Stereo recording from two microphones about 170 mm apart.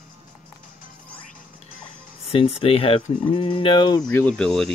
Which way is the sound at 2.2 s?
35° left (ahead or behind).